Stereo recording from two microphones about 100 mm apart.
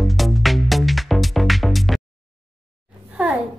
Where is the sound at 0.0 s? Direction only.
Centre (ahead or behind).